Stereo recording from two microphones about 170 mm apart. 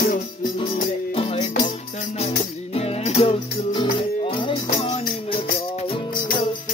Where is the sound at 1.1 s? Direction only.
35° left (ahead or behind).